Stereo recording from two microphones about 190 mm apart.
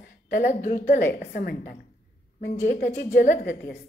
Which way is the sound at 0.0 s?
40° left (ahead or behind).